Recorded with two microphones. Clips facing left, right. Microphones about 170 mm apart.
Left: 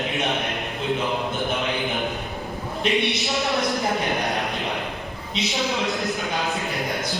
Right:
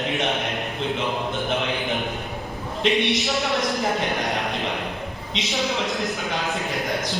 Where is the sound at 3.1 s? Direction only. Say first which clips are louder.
Right 2 dB; centre (ahead or behind).